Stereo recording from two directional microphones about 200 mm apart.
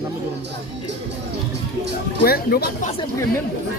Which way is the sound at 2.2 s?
50° left (ahead or behind).